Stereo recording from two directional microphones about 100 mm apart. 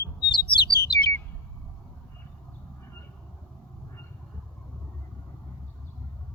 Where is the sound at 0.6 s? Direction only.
45° left (ahead or behind).